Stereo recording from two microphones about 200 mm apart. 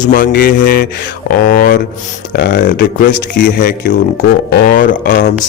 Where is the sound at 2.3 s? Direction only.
60° left (ahead or behind); by 5.3 s 40° left (ahead or behind).